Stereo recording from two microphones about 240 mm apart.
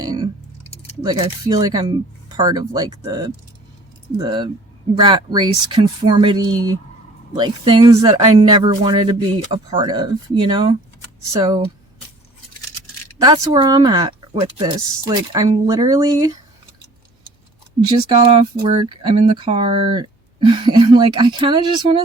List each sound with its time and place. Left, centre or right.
0.0 s a sound: centre
0.7 s keys jangling: left
1.0 s speech: centre
13.1 s speech: centre
17.7 s speech: centre